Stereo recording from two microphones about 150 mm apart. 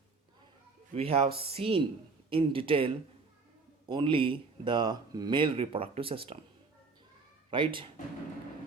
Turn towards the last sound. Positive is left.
turn(degrees=-35)  # may be behind; listen again after turning